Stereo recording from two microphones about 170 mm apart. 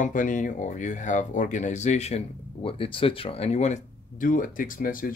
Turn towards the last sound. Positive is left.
turn(degrees=55)  # may be behind; listen again after turning